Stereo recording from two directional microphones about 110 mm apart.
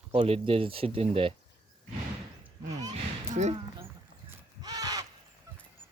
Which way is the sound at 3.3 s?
90° right.